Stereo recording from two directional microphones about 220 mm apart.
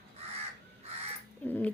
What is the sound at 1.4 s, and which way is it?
Dog, 5° left (ahead or behind).